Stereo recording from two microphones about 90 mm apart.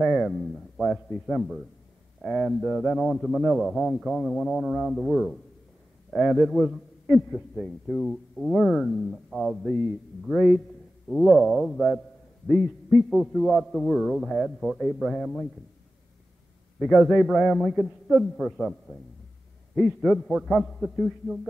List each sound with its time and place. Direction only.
0.0 s a man's voice: centre (ahead or behind)
16.8 s a man's voice: centre (ahead or behind)